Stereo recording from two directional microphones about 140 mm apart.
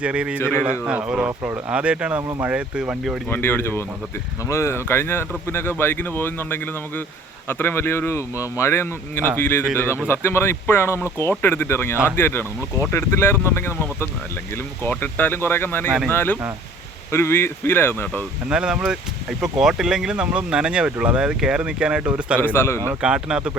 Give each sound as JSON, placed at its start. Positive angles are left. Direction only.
{"t": 0.0, "sound": "speech", "side_deg": -10}
{"t": 0.3, "sound": "speech", "side_deg": 15}
{"t": 0.7, "sound": "speech", "side_deg": -10}
{"t": 1.3, "sound": "speech", "side_deg": -20}
{"t": 1.7, "sound": "speech", "side_deg": -10}
{"t": 3.2, "sound": "speech", "side_deg": 15}
{"t": 18.4, "sound": "speech", "side_deg": -5}
{"t": 22.5, "sound": "a man's voice", "side_deg": 20}
{"t": 23.0, "sound": "speech", "side_deg": -5}